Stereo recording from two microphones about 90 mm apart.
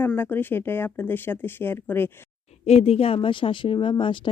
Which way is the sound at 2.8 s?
90° left.